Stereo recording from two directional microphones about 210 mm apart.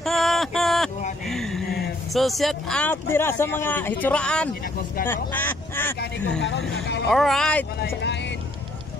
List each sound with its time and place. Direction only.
0.0 s a sound: centre (ahead or behind)
1.8 s speech: centre (ahead or behind)
6.7 s speech: 55° left (ahead or behind)
7.1 s speech: centre (ahead or behind)